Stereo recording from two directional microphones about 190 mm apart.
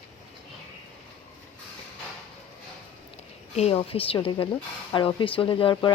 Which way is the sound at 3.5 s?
30° left (ahead or behind).